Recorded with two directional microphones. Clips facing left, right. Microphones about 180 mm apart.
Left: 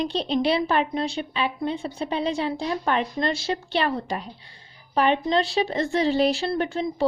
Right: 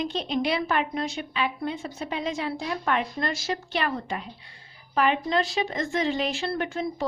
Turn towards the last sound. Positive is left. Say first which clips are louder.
# left 3 dB
turn(degrees=35)  # may be behind; listen again after turning